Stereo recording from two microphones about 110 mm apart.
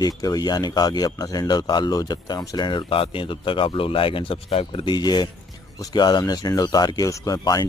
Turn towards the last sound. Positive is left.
turn(degrees=35)  # may be behind; listen again after turning